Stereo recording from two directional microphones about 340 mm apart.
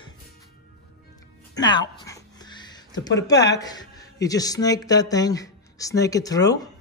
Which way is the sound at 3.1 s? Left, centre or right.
Left.